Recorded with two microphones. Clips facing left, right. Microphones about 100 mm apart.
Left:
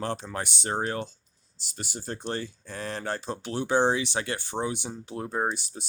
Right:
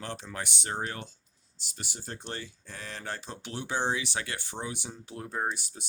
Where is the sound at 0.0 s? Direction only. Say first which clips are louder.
Left 6 dB; 35° left (ahead or behind).